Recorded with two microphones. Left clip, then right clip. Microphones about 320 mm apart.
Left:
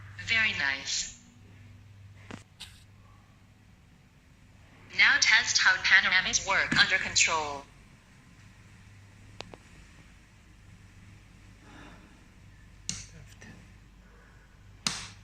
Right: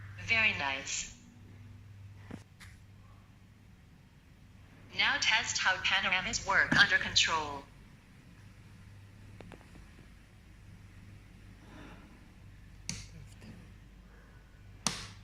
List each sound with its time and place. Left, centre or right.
0.3 s a woman's voice: centre
4.9 s a woman's voice: centre
9.4 s a sound: left